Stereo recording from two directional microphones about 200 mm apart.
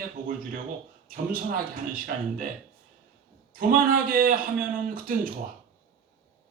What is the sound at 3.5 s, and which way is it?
A man's voice, 45° right (ahead or behind).